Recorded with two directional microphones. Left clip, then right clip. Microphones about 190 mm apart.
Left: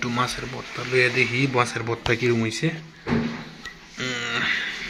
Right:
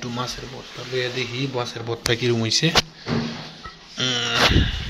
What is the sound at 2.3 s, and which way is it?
Speech, 15° right (ahead or behind).